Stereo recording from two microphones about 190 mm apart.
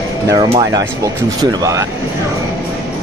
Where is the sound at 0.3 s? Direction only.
25° right (ahead or behind).